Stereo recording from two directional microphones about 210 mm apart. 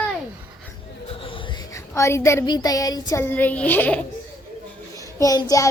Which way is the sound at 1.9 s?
15° left (ahead or behind).